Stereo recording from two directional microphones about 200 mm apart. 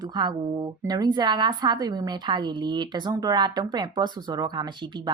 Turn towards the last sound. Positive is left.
turn(degrees=-20)  # may be behind; listen again after turning